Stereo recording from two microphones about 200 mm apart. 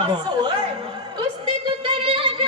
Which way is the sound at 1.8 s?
25° right (ahead or behind).